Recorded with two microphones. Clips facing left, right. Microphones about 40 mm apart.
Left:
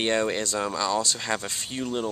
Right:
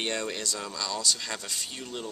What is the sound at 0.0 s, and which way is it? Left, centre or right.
Speech, left.